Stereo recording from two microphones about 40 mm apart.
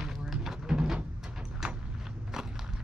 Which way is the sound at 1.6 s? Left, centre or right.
Centre.